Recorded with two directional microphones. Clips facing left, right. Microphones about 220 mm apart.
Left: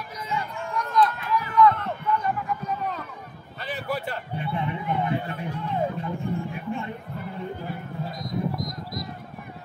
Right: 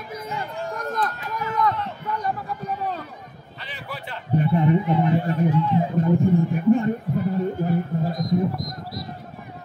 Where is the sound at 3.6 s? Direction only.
45° left (ahead or behind).